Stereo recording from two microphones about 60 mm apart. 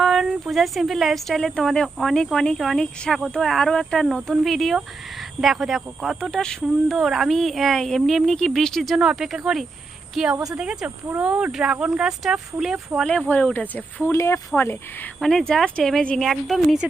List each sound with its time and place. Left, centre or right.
0.0 s a woman's voice: centre
6.3 s speech: centre
6.9 s a woman's voice: centre
9.0 s a woman's voice: centre
11.2 s speech: right
13.2 s speech: left
14.1 s speech: left
14.6 s speech: left
15.2 s speech: centre